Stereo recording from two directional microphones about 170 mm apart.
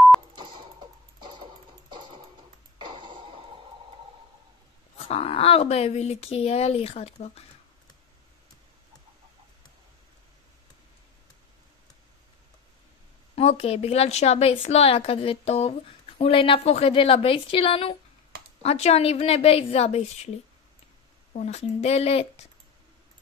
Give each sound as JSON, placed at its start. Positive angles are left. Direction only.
{"t": 0.4, "sound": "music", "side_deg": -30}
{"t": 2.9, "sound": "a sound", "side_deg": -25}
{"t": 4.9, "sound": "a woman's voice", "side_deg": 35}
{"t": 13.4, "sound": "a woman's voice", "side_deg": 35}
{"t": 21.3, "sound": "a woman's voice", "side_deg": 40}